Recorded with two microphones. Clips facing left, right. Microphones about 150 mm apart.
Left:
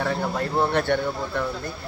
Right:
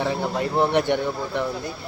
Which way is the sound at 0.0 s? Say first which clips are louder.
Right 1 dB; 15° right (ahead or behind).